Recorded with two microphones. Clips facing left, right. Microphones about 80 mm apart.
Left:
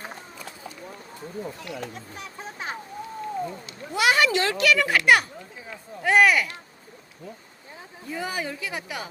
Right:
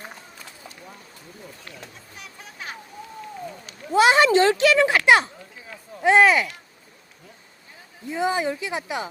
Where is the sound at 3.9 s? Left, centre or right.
Right.